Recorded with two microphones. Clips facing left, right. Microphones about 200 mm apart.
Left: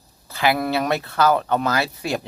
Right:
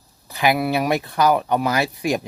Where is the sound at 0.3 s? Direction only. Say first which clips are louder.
Right 1 dB; 15° right (ahead or behind).